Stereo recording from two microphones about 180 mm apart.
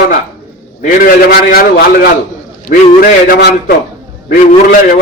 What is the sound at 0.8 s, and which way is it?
Speech, 55° left (ahead or behind).